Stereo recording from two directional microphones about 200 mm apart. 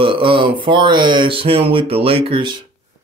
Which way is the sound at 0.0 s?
25° right (ahead or behind).